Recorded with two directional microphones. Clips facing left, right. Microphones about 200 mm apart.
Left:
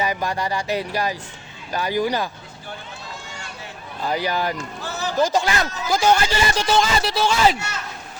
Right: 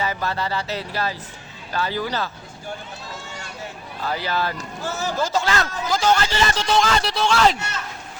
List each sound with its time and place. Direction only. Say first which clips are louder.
0.0 s speech: left 2 dB; 15° left (ahead or behind)
4.0 s speech: left 2 dB; 15° left (ahead or behind)
4.8 s a man's voice: right 6 dB; 45° right (ahead or behind)
5.2 s speech: left 3 dB; 15° left (ahead or behind)
6.7 s speech: right 1 dB; 5° left (ahead or behind)